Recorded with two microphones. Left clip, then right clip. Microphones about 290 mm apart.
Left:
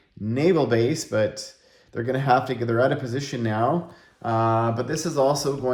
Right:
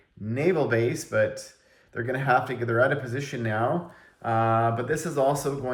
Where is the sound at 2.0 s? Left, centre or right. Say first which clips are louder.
Left 3 dB; left.